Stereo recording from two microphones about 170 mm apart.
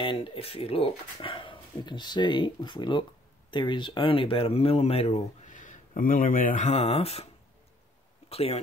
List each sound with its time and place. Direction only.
0.0 s speech: 30° left (ahead or behind)
8.3 s speech: 35° left (ahead or behind)